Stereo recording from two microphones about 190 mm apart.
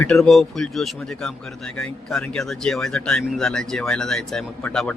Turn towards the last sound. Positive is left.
turn(degrees=5)  # may be behind; listen again after turning